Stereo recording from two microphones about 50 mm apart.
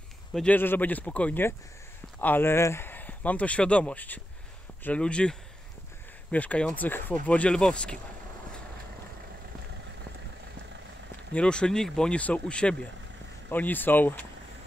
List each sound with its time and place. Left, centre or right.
0.6 s speech: left
2.4 s speech: left
2.9 s speech: left
4.9 s speech: left
6.3 s speech: left
7.2 s speech: left
11.3 s speech: centre
12.2 s speech: left
13.5 s speech: left